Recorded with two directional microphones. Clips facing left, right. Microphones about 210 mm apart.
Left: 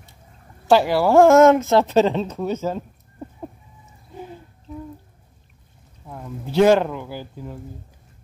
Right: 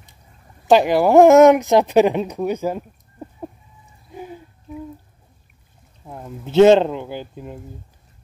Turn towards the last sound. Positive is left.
turn(degrees=-20)  # may be behind; listen again after turning